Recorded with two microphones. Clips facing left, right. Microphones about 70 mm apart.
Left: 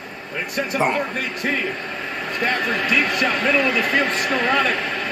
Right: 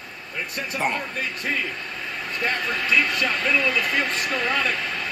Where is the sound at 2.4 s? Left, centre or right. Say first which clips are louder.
Left 4 dB; left.